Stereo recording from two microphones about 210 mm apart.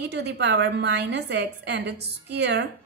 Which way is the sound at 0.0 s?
50° right (ahead or behind).